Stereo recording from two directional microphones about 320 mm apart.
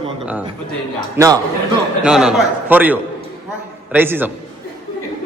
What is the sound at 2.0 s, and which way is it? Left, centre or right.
A man's voice, centre.